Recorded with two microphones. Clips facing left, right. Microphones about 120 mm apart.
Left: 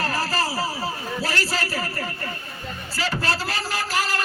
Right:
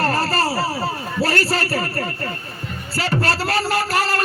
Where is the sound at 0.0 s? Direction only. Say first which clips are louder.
Right 5 dB; 60° right (ahead or behind).